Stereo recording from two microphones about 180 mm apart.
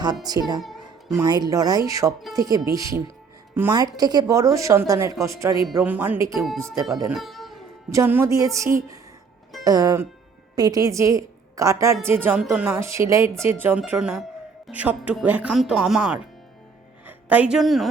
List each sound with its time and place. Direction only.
0.3 s a woman's voice: 20° right (ahead or behind)
0.6 s a sound: centre (ahead or behind)
1.1 s a woman's voice: 20° right (ahead or behind)
7.1 s music: centre (ahead or behind)
7.9 s a woman's voice: 15° right (ahead or behind)